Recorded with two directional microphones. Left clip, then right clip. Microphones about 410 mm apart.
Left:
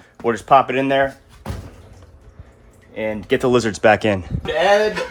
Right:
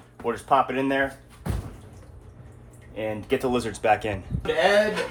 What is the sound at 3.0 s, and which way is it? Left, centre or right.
Speech, left.